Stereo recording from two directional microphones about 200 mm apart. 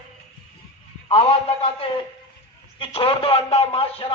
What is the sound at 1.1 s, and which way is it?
A man's voice, 30° left (ahead or behind).